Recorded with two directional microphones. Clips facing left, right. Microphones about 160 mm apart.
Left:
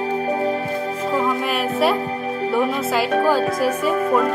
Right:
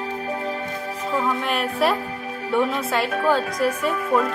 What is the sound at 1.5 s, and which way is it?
Speech, centre (ahead or behind).